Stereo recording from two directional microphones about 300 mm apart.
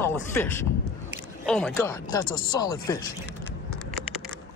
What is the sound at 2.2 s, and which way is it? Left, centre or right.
Speech, left.